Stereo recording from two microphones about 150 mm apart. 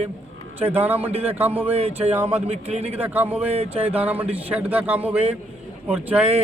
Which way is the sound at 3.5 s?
40° right (ahead or behind).